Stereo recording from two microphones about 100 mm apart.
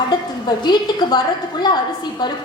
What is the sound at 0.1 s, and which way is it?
A woman's voice, 45° left (ahead or behind).